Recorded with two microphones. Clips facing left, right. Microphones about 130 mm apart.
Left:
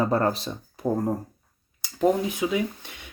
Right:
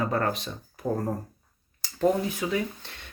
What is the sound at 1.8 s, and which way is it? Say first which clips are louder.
Speech: left 2 dB; 15° left (ahead or behind).